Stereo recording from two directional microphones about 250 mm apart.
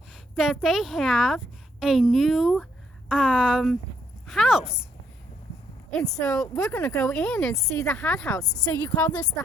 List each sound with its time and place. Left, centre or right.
0.1 s a woman's voice: centre
6.2 s speech: centre
8.4 s a woman's voice: centre